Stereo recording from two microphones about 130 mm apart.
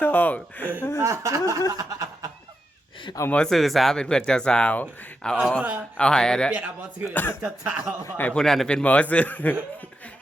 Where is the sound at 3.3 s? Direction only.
5° left (ahead or behind).